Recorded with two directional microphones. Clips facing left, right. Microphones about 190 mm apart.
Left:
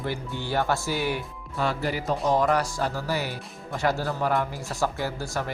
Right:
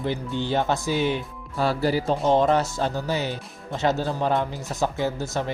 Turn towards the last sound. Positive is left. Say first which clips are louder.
# right 4 dB
turn(degrees=-20)  # may be behind; listen again after turning